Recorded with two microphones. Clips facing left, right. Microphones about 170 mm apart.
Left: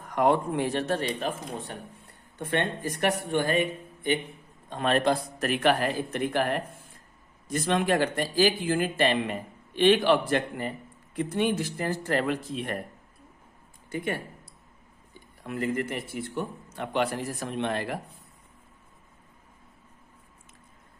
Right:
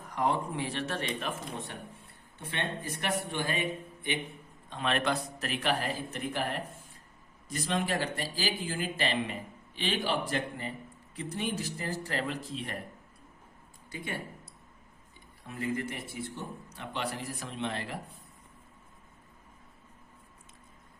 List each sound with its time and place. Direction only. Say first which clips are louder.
0.0 s speech: left 7 dB; 60° left (ahead or behind); by 1.8 s 35° left (ahead or behind)
2.4 s speech: left 8 dB; 55° left (ahead or behind)
4.7 s speech: left 6 dB; 45° left (ahead or behind)
5.4 s speech: left 7 dB; 55° left (ahead or behind)
13.9 s speech: left 8 dB; 55° left (ahead or behind)
15.4 s speech: left 5 dB; 70° left (ahead or behind)